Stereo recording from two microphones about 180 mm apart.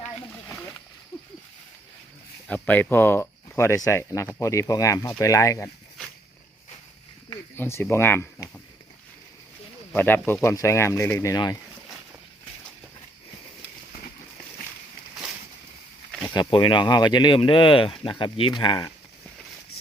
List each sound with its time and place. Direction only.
2.5 s speech: 10° left (ahead or behind)
7.5 s speech: 10° left (ahead or behind)
9.9 s speech: 10° left (ahead or behind)
16.2 s speech: 25° left (ahead or behind)